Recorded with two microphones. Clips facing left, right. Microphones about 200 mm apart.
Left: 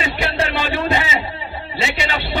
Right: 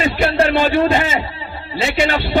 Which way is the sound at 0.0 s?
50° right (ahead or behind).